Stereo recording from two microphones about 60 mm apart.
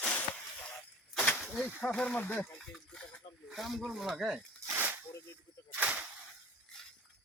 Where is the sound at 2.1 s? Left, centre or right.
Left.